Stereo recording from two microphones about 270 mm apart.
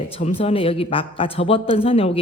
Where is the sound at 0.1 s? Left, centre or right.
Left.